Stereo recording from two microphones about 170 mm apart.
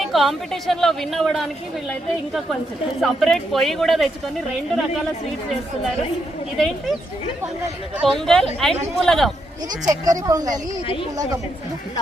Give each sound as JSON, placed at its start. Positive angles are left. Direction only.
{"t": 0.0, "sound": "a woman's voice", "side_deg": 0}
{"t": 6.6, "sound": "a woman's voice", "side_deg": 0}
{"t": 8.1, "sound": "a woman's voice", "side_deg": 5}
{"t": 9.9, "sound": "speech", "side_deg": -20}